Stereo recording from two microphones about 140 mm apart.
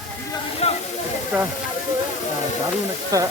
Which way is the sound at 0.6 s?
45° left (ahead or behind).